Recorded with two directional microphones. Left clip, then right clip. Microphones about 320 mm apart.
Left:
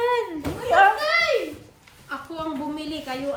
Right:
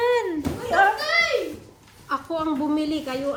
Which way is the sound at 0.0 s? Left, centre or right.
Centre.